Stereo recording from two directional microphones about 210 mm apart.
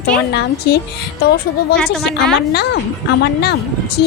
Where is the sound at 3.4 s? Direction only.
50° left (ahead or behind).